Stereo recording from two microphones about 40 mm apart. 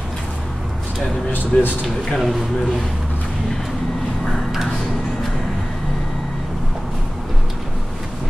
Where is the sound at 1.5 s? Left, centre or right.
Left.